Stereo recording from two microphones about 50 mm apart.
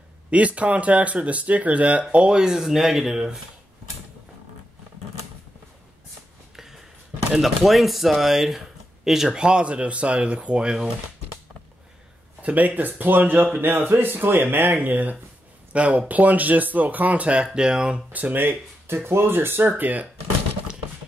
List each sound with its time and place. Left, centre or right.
0.3 s speech: right
2.0 s speech: centre
6.5 s a sound: centre
7.4 s speech: centre
12.4 s speech: right
15.7 s speech: right
18.1 s speech: right
18.4 s speech: right
19.7 s speech: right